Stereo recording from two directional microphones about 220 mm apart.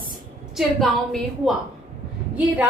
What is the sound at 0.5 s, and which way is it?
A woman's voice, centre (ahead or behind).